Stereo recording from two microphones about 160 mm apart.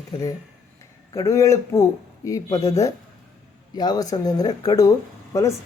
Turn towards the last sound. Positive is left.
turn(degrees=20)  # may be behind; listen again after turning